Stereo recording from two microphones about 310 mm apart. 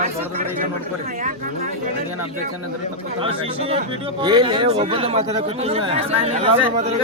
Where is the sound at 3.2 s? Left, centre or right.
Centre.